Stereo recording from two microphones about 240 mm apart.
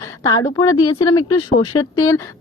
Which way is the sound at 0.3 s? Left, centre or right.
Centre.